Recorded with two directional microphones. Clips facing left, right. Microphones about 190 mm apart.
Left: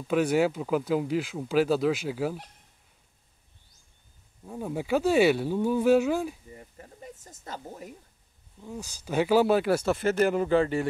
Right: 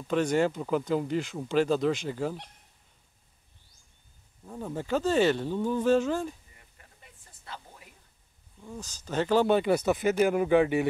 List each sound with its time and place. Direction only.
0.1 s speech: 5° left (ahead or behind)
4.5 s speech: 10° left (ahead or behind)
6.5 s a sound: 35° left (ahead or behind)
8.5 s speech: 10° left (ahead or behind)
9.8 s speech: 10° right (ahead or behind)